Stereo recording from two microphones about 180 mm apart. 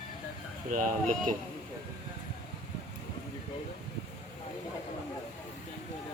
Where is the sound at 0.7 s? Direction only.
45° right (ahead or behind).